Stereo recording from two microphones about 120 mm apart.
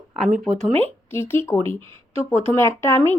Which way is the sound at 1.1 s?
20° left (ahead or behind).